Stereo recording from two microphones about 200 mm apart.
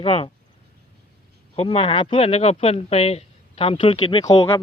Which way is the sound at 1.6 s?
30° left (ahead or behind).